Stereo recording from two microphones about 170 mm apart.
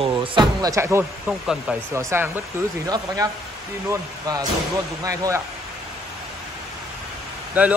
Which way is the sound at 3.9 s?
20° right (ahead or behind).